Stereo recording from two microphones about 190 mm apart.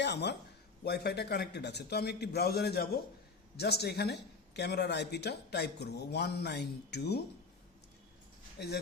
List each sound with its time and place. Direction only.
0.0 s a woman's voice: 65° left (ahead or behind)
8.5 s speech: 60° left (ahead or behind)